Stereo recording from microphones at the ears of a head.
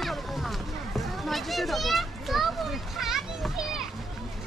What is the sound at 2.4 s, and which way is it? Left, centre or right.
Children playing, right.